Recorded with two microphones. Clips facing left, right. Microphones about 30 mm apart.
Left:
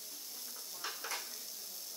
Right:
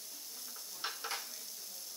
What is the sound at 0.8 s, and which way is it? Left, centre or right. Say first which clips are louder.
Stir: right 2 dB; right.